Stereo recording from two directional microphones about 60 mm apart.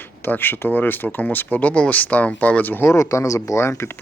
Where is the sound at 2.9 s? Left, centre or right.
Left.